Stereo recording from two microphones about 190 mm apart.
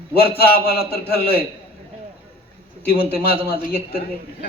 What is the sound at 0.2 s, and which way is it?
A man's voice, 55° left (ahead or behind).